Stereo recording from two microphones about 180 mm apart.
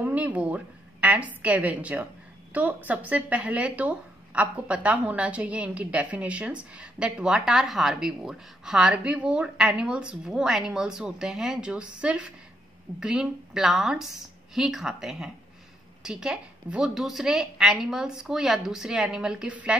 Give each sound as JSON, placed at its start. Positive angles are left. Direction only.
{"t": 0.0, "sound": "a woman's voice", "side_deg": -10}